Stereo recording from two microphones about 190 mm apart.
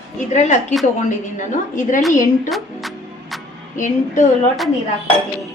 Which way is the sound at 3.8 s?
40° left (ahead or behind).